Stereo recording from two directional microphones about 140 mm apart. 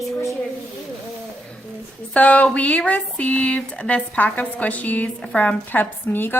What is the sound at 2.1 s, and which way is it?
Speech, 10° left (ahead or behind).